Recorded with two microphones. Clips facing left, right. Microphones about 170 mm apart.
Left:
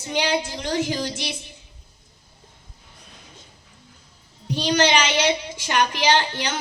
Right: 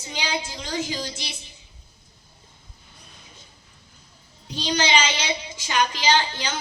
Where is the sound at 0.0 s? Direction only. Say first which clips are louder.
Left 6 dB; 65° left (ahead or behind).